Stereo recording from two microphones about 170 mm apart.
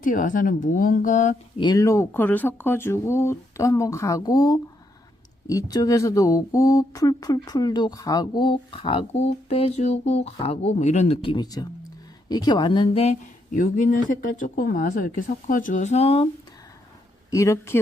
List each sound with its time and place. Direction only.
0.0 s speech: 50° left (ahead or behind)
1.5 s speech: 25° left (ahead or behind)
17.3 s speech: 20° left (ahead or behind)